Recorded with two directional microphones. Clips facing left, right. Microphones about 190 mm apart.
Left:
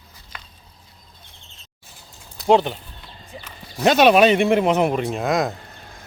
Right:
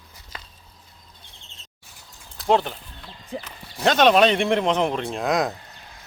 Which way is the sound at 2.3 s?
Centre (ahead or behind).